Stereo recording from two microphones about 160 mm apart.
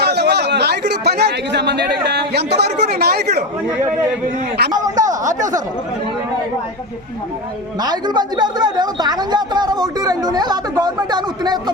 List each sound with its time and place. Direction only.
0.0 s speech: 90° right
4.7 s a sound: 25° right (ahead or behind)
7.8 s a woman's voice: 25° right (ahead or behind)